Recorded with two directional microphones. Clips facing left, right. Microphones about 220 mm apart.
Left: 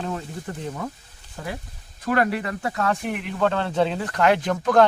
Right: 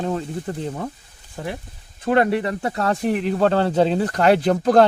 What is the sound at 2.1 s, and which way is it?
Speech, 25° right (ahead or behind).